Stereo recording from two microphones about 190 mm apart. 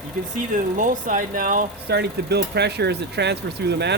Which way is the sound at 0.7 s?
45° right (ahead or behind).